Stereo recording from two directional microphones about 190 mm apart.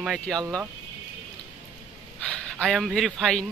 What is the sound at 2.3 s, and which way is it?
Speech, 5° left (ahead or behind).